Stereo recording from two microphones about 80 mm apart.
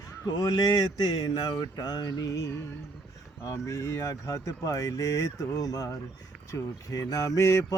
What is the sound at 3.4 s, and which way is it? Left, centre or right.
Speech, left.